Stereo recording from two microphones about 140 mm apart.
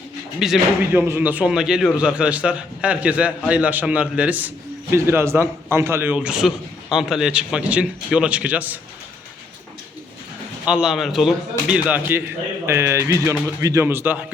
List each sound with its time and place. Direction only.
0.3 s speech: 5° right (ahead or behind)
0.9 s a man's voice: 15° right (ahead or behind)
10.7 s a man's voice: 5° right (ahead or behind)